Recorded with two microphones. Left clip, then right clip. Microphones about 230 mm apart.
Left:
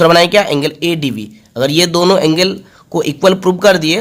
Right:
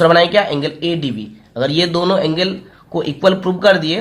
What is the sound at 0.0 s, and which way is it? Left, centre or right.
A man's voice, left.